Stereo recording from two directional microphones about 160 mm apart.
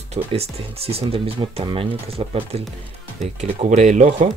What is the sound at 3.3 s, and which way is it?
Speech, 50° right (ahead or behind).